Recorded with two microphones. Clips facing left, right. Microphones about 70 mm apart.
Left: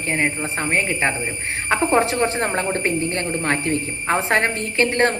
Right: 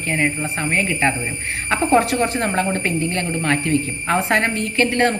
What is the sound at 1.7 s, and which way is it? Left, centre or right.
A woman's voice, left.